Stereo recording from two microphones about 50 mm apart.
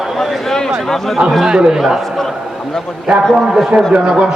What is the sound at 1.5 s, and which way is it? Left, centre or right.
Speech, centre.